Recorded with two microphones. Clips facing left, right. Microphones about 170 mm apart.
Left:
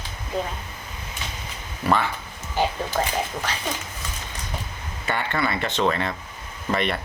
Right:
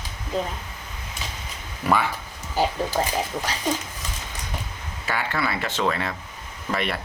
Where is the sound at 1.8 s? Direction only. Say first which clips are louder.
Even; 10° right (ahead or behind).